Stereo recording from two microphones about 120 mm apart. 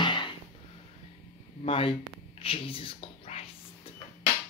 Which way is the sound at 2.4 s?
50° left (ahead or behind).